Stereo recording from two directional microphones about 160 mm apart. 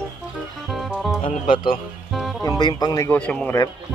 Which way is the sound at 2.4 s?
25° left (ahead or behind).